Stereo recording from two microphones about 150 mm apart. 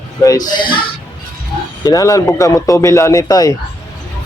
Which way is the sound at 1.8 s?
25° left (ahead or behind).